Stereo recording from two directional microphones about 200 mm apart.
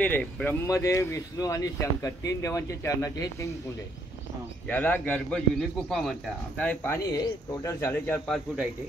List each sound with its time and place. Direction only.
0.0 s a man's voice: 5° left (ahead or behind)
4.6 s a man's voice: 5° left (ahead or behind)